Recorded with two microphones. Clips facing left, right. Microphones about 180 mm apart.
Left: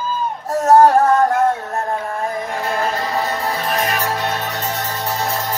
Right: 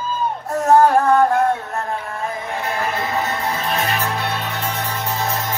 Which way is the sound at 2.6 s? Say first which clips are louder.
Left 2 dB; 35° left (ahead or behind).